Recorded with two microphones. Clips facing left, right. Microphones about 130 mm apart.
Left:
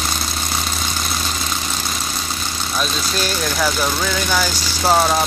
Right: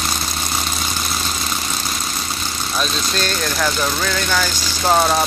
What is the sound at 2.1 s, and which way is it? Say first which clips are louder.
Speech: even; centre (ahead or behind).